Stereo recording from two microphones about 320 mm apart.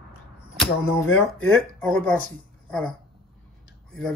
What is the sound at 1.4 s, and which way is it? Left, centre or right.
Speech, centre.